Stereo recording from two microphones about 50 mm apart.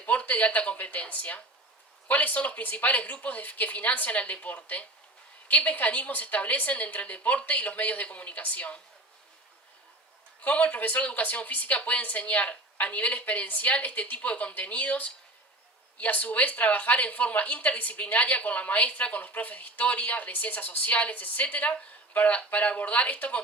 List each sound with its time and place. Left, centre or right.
0.0 s speech: left
10.4 s speech: left